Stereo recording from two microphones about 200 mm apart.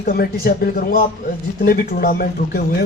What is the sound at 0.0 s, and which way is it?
A man's voice, 50° left (ahead or behind).